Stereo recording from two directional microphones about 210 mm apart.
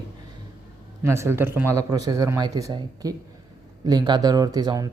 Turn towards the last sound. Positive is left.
turn(degrees=-20)  # may be behind; listen again after turning